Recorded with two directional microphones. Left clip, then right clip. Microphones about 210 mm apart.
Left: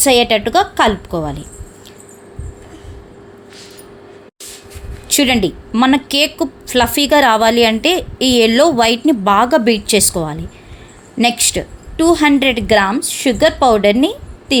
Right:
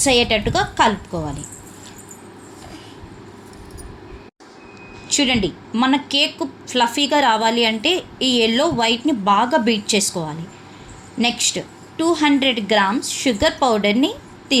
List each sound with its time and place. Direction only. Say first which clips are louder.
0.0 s speech: left 5 dB; 50° left (ahead or behind)
5.0 s speech: left 5 dB; 55° left (ahead or behind)